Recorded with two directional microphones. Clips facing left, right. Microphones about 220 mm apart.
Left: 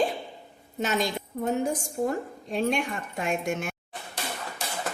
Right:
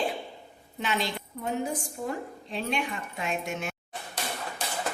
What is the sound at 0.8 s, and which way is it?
A woman's voice, 45° left (ahead or behind).